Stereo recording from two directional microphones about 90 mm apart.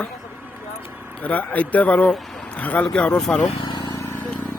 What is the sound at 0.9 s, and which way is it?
Vehicle, 20° right (ahead or behind).